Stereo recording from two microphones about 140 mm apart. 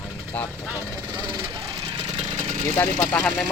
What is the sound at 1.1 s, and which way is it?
Vehicle, 30° right (ahead or behind).